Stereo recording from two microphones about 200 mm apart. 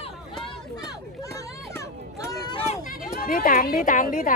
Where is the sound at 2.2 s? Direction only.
20° left (ahead or behind).